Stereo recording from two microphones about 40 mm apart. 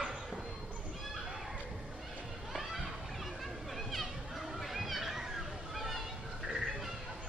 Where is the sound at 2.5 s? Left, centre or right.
Centre.